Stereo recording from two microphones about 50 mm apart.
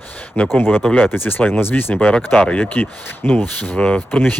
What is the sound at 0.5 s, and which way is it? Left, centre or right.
Speech, left.